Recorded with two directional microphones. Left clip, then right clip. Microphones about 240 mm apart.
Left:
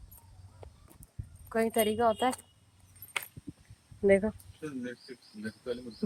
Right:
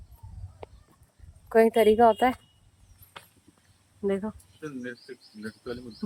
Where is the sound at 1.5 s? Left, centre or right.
Centre.